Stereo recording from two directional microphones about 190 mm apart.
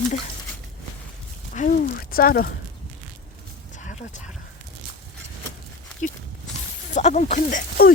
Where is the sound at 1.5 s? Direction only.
50° left (ahead or behind).